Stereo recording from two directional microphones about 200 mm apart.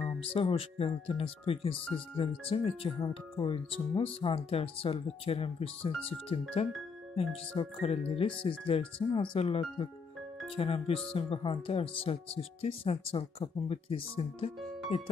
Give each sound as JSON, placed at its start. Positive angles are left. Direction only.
{"t": 0.3, "sound": "speech", "side_deg": 25}